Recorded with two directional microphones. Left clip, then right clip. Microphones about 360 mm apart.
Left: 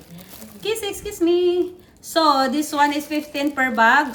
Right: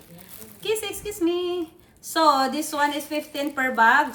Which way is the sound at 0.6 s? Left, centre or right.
Centre.